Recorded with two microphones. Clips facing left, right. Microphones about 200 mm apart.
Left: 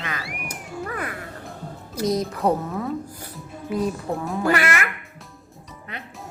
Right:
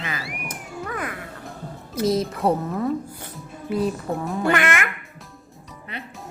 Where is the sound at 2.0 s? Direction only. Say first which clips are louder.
Right 1 dB; centre (ahead or behind).